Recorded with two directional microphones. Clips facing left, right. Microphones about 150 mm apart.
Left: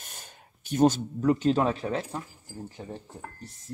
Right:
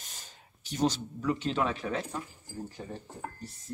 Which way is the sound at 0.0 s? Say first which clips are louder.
Left 4 dB; 55° left (ahead or behind).